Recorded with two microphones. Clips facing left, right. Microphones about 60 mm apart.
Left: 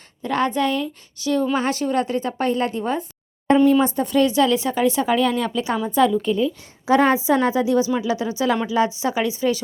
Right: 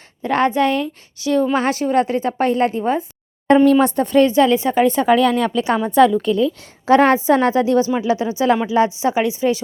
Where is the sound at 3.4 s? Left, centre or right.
Right.